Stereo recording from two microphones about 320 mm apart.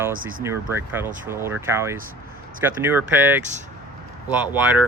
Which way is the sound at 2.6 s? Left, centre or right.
Centre.